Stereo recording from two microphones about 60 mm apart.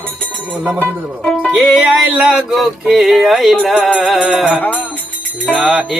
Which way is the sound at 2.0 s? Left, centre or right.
Centre.